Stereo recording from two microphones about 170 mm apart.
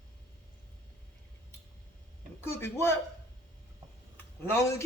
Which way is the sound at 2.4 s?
15° left (ahead or behind).